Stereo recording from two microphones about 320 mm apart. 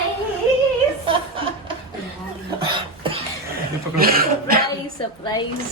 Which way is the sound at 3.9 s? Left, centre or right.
Right.